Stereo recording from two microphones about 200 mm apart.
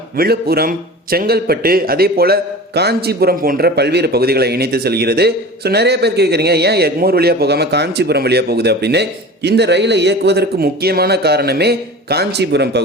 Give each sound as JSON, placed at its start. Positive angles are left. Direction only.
{"t": 0.2, "sound": "a man's voice", "side_deg": -50}